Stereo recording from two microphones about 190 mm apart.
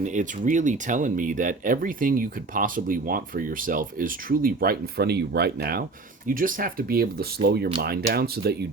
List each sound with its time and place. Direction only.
0.0 s speech: 40° right (ahead or behind)